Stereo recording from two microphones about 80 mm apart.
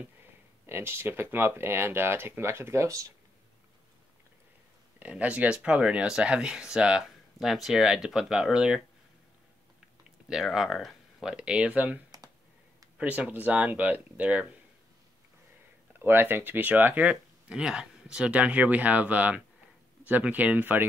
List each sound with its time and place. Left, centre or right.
0.7 s speech: right
4.9 s speech: centre
10.3 s speech: centre
16.0 s speech: right